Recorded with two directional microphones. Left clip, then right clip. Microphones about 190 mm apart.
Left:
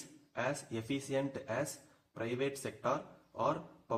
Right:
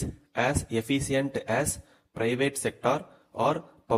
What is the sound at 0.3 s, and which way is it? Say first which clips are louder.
A man's voice: right 10 dB; 35° right (ahead or behind).